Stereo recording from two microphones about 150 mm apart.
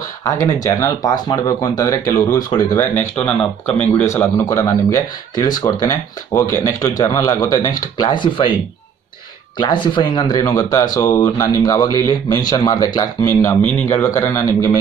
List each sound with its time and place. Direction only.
0.2 s speech: 20° left (ahead or behind)
9.6 s speech: 30° left (ahead or behind)